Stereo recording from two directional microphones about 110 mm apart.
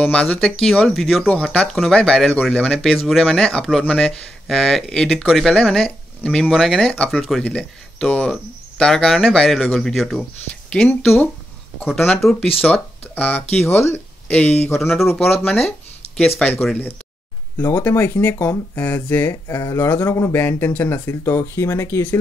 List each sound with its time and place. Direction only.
0.0 s speech: 10° left (ahead or behind)
6.5 s speech: centre (ahead or behind)
12.1 s speech: 5° left (ahead or behind)
12.6 s speech: 15° left (ahead or behind)
14.2 s speech: 10° left (ahead or behind)
14.9 s speech: centre (ahead or behind)
15.3 s speech: 15° left (ahead or behind)
17.6 s speech: 20° left (ahead or behind)